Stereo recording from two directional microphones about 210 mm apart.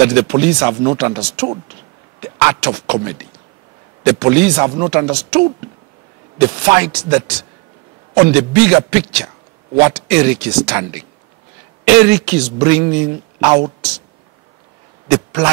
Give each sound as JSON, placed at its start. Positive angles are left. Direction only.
{"t": 0.0, "sound": "speech", "side_deg": -10}
{"t": 15.0, "sound": "a man's voice", "side_deg": -15}